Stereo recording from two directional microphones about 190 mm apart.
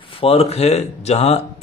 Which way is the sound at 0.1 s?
30° left (ahead or behind).